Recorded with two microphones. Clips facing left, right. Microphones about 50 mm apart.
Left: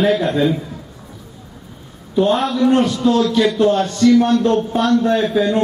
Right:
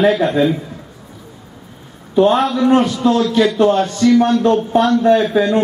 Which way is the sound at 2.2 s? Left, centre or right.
Centre.